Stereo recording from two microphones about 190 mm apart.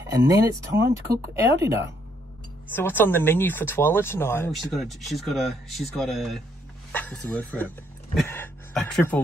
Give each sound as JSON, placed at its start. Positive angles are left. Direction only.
{"t": 0.0, "sound": "speech", "side_deg": -15}
{"t": 2.7, "sound": "speech", "side_deg": 10}
{"t": 4.5, "sound": "speech", "side_deg": 0}